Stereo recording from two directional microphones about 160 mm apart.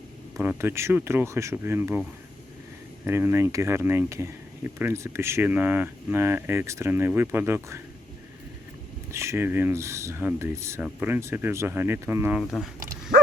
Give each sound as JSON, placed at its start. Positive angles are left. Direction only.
{"t": 0.4, "sound": "speech", "side_deg": -15}
{"t": 9.1, "sound": "speech", "side_deg": -15}
{"t": 12.4, "sound": "speech", "side_deg": 0}
{"t": 12.8, "sound": "bow-wow", "side_deg": -60}